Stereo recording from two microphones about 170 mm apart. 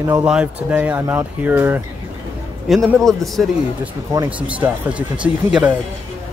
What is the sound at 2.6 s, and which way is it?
Speech, centre (ahead or behind).